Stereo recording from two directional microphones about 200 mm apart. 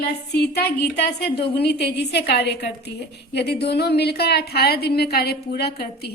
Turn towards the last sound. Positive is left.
turn(degrees=55)  # may be behind; listen again after turning